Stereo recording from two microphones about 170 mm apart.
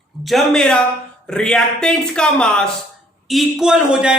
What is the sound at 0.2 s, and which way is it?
Speech, centre (ahead or behind).